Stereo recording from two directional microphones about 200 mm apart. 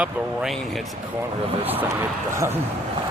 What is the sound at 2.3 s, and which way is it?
Speech, 15° right (ahead or behind).